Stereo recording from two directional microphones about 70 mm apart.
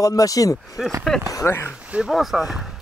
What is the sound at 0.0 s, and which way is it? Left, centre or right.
Speech, left.